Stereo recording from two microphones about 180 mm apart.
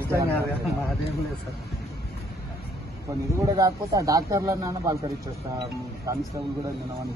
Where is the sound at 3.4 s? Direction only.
20° right (ahead or behind).